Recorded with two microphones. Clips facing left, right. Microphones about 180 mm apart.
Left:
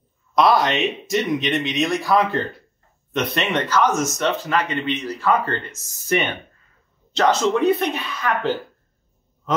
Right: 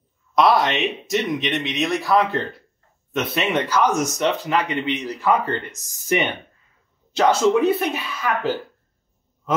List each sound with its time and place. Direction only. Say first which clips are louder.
0.4 s speech: even; centre (ahead or behind)